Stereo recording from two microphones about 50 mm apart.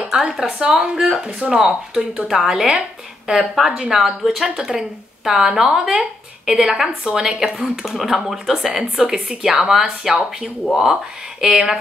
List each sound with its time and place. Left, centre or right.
0.2 s speech: centre